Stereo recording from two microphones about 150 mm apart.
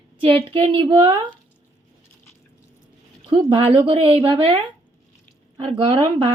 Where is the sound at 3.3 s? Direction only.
35° right (ahead or behind).